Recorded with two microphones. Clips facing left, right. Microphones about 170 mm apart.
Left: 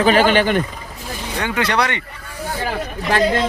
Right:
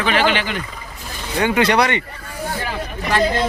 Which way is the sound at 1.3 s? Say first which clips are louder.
Right 4 dB; 15° right (ahead or behind).